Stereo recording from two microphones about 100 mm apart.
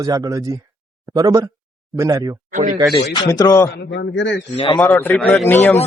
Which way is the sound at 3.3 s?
40° left (ahead or behind).